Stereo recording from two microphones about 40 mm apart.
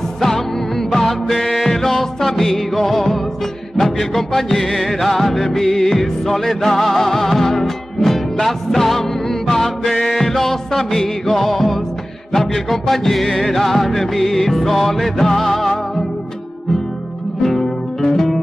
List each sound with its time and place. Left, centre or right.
0.9 s music: centre
18.0 s music: centre